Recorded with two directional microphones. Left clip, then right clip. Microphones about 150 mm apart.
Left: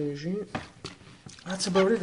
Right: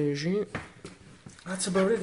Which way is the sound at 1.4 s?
35° left (ahead or behind).